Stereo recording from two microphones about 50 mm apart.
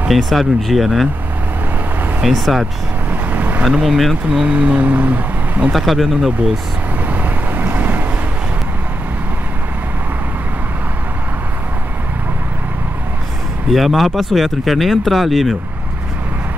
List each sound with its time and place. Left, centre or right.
0.1 s speech: centre
2.2 s speech: centre
3.1 s vehicle: right
3.8 s speech: centre
4.6 s speech: right
5.7 s speech: centre
7.1 s vehicle: right
13.7 s speech: centre